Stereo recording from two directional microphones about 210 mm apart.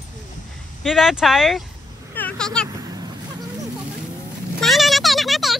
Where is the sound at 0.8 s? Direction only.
Centre (ahead or behind).